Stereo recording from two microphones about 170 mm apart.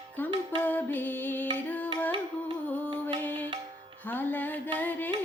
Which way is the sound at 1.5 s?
10° left (ahead or behind).